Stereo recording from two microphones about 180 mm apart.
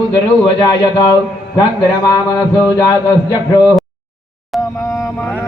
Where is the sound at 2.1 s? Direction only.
20° left (ahead or behind).